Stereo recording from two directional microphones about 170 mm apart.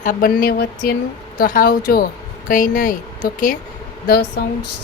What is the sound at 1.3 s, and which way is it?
Speech, 55° left (ahead or behind).